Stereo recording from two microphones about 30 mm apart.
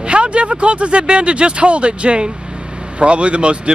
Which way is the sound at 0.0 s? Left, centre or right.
Right.